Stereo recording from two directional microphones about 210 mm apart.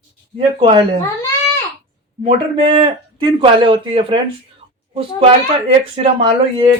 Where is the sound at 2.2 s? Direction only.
25° right (ahead or behind).